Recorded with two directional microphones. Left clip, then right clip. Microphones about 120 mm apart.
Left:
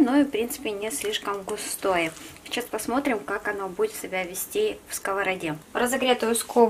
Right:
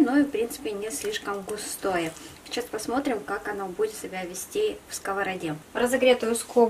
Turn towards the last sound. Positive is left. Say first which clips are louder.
# left 2 dB
turn(degrees=20)  # may be behind; listen again after turning